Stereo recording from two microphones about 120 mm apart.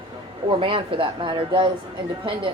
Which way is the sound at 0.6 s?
50° right (ahead or behind).